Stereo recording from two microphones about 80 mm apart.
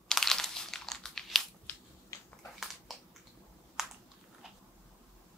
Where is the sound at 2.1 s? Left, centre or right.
Left.